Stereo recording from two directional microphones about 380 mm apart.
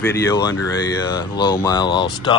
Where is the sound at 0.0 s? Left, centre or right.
Centre.